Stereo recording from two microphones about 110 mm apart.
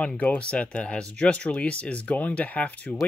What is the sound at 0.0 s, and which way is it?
Speech, 10° left (ahead or behind).